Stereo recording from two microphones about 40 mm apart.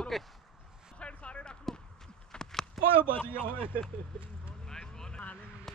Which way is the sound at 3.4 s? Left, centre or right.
Right.